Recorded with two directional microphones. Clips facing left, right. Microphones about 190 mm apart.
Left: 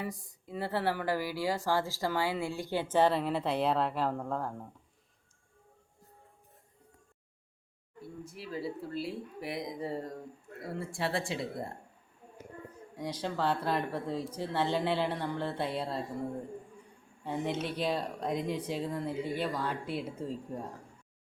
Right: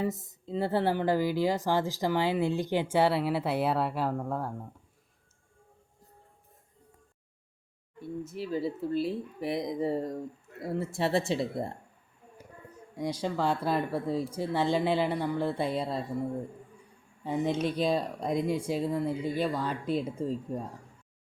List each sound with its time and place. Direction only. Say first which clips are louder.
0.0 s speech: right 7 dB; 25° right (ahead or behind); by 4.7 s 5° right (ahead or behind)
8.0 s speech: right 8 dB; 25° right (ahead or behind)
13.0 s speech: right 3 dB; 10° right (ahead or behind)
17.2 s speech: right 5 dB; 15° right (ahead or behind)